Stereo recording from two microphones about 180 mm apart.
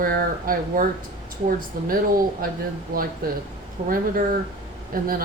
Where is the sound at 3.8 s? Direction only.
50° right (ahead or behind).